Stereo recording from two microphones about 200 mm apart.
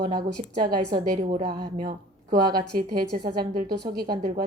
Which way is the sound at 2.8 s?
50° right (ahead or behind).